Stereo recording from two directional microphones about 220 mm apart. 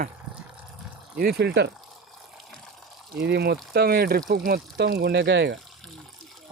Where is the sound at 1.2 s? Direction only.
45° right (ahead or behind).